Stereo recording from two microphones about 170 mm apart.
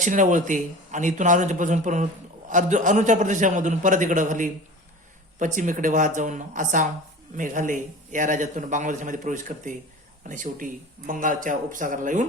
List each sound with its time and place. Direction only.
0.0 s a man's voice: 50° right (ahead or behind)
5.5 s a man's voice: 50° right (ahead or behind)